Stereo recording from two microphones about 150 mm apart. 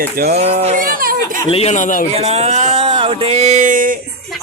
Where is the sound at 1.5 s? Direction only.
45° left (ahead or behind).